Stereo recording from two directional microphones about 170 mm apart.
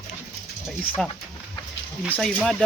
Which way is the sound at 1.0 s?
5° left (ahead or behind).